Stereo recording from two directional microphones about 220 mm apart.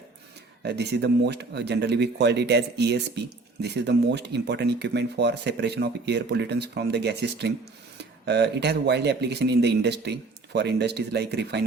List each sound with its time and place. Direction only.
0.6 s speech: 50° right (ahead or behind)